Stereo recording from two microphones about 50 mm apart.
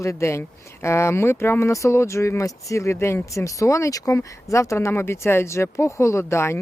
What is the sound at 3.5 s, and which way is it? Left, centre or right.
Speech, left.